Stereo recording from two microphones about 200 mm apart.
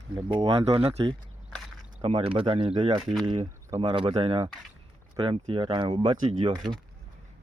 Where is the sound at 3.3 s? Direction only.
25° right (ahead or behind).